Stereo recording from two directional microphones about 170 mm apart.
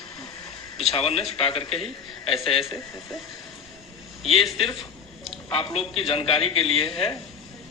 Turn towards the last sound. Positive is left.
turn(degrees=35)  # may be behind; listen again after turning